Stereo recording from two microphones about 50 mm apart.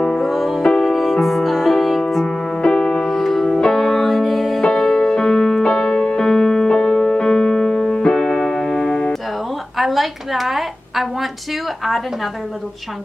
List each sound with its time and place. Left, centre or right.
0.0 s music: centre
0.3 s music: centre
8.0 s keyboard: centre
9.8 s a sound: centre